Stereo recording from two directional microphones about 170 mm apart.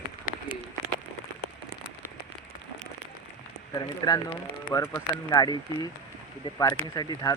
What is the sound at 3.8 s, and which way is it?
Speech, 25° left (ahead or behind).